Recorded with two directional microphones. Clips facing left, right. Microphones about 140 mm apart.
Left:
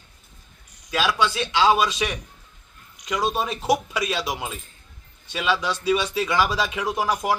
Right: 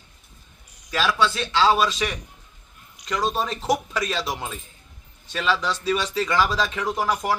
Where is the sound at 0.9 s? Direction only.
10° left (ahead or behind).